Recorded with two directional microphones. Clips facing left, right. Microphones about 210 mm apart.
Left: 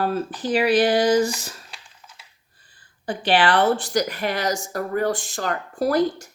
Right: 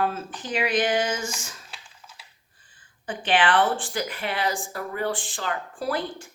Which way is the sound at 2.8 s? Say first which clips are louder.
Left 5 dB; 35° left (ahead or behind).